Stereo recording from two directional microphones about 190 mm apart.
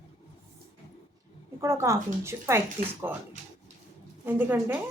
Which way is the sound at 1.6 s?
15° right (ahead or behind).